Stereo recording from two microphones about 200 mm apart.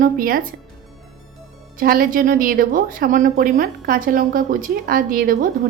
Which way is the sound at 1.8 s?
45° right (ahead or behind).